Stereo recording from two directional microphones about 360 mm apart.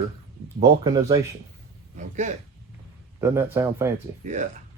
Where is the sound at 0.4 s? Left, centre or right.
Centre.